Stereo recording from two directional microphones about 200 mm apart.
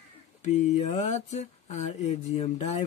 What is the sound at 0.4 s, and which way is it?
Speech, 35° left (ahead or behind).